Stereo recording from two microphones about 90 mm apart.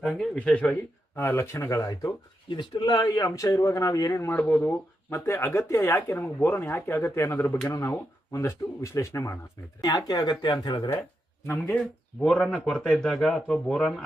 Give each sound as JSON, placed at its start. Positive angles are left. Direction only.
{"t": 0.0, "sound": "speech", "side_deg": 0}
{"t": 0.3, "sound": "speech", "side_deg": 15}
{"t": 2.5, "sound": "a man's voice", "side_deg": 60}
{"t": 5.0, "sound": "speech", "side_deg": 30}
{"t": 9.8, "sound": "speech", "side_deg": 50}
{"t": 11.4, "sound": "speech", "side_deg": 25}
{"t": 12.2, "sound": "a man's voice", "side_deg": 10}